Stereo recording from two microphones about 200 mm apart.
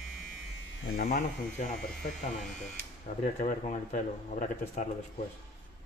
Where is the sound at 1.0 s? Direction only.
45° left (ahead or behind).